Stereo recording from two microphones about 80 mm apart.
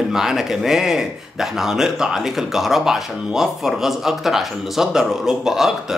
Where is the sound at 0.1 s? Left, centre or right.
Centre.